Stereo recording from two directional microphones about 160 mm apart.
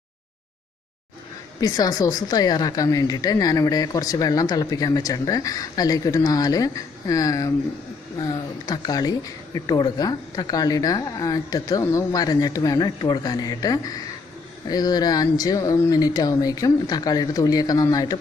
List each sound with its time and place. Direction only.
1.6 s a woman's voice: 25° left (ahead or behind)